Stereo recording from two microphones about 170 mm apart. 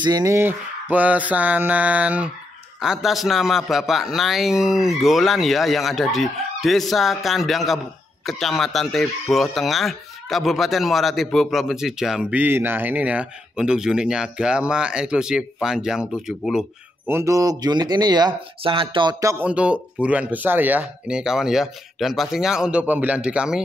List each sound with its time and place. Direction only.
0.0 s speech: 20° right (ahead or behind); by 17.1 s 5° right (ahead or behind)
17.1 s speech: 15° right (ahead or behind)
19.4 s speech: 5° right (ahead or behind)